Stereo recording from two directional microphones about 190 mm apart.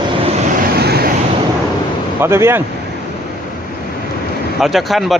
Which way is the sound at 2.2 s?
15° right (ahead or behind).